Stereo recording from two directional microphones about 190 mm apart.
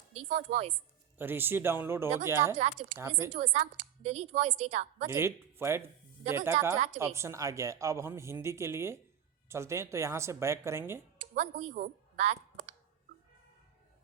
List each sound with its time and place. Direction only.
0.3 s a woman's voice: 40° right (ahead or behind)
1.2 s speech: 10° right (ahead or behind)
3.3 s a woman's voice: 35° right (ahead or behind)
5.0 s speech: 15° right (ahead or behind)
6.7 s a woman's voice: 35° right (ahead or behind)
7.2 s speech: 15° right (ahead or behind)
11.3 s speech: 35° right (ahead or behind)